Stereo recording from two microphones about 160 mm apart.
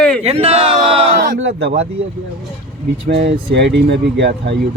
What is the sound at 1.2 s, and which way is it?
Speech, 75° right (ahead or behind).